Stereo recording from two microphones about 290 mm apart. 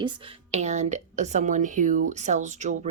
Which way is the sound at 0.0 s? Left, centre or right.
Centre.